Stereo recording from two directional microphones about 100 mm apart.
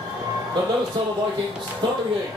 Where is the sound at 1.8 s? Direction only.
50° right (ahead or behind).